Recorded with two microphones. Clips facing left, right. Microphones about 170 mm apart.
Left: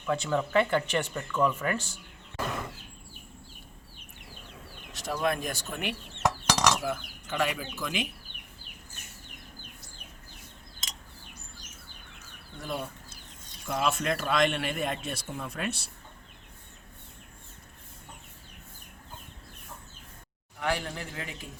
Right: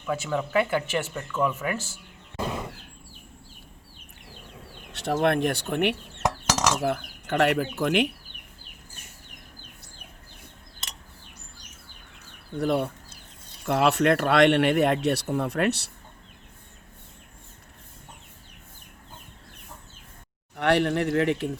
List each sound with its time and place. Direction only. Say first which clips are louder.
0.0 s speech: even; 5° right (ahead or behind)
4.9 s speech: right 6 dB; 65° right (ahead or behind)
10.8 s a sound: right 3 dB; 65° right (ahead or behind)
12.5 s speech: right 11 dB; 65° right (ahead or behind)
20.6 s speech: right 10 dB; 70° right (ahead or behind)